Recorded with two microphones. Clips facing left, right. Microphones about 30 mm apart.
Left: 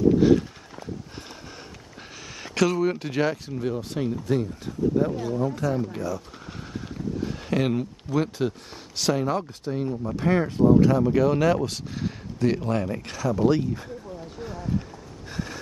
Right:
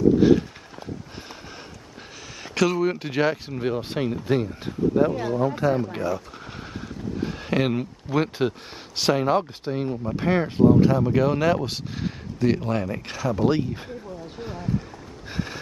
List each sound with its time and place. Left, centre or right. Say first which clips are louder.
0.2 s a sound: right 1 dB; centre
2.4 s speech: right 1 dB; centre
3.5 s speech: right 2 dB; right
12.4 s speech: right 1 dB; centre
14.4 s boat: right 1 dB; centre
15.3 s a sound: right 2 dB; right